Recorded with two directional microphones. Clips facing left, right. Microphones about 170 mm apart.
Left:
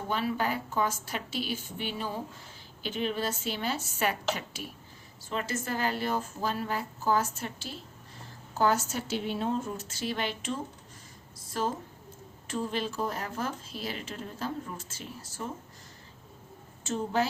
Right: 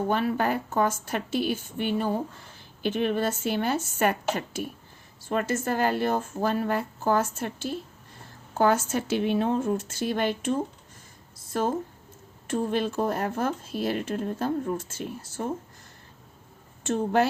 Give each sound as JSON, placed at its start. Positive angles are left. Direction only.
{"t": 0.1, "sound": "speech", "side_deg": -55}
{"t": 16.8, "sound": "speech", "side_deg": -60}